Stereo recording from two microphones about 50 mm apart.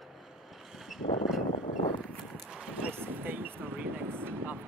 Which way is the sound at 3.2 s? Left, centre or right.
Right.